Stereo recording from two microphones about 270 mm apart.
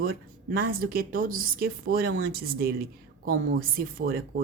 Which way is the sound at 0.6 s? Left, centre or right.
Right.